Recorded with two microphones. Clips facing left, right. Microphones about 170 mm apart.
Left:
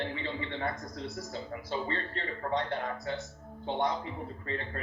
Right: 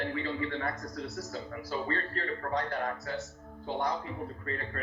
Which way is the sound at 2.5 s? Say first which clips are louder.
Left 3 dB; 25° left (ahead or behind).